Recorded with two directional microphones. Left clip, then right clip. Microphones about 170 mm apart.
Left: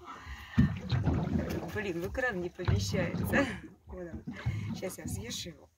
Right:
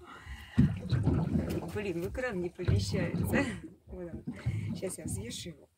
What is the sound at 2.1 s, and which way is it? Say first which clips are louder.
Speech: left 2 dB; 5° right (ahead or behind).